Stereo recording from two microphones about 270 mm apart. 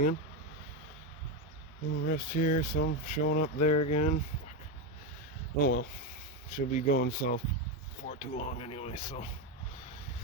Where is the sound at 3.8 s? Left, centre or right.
Left.